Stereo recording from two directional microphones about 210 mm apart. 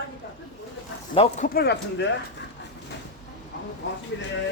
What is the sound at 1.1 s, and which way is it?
Speech, 30° left (ahead or behind).